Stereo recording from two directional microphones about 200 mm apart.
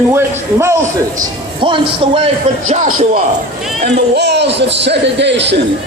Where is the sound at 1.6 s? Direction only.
25° right (ahead or behind).